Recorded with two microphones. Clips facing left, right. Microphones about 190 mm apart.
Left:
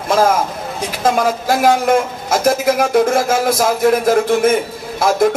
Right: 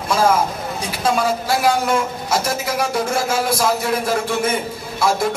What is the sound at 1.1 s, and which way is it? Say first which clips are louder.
A man's voice: left 3 dB; 50° left (ahead or behind).